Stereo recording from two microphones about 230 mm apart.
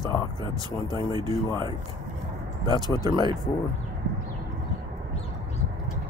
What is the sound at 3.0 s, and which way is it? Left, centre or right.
Speech, centre.